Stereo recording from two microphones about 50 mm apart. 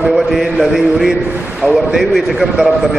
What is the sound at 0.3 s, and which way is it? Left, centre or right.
Speech, centre.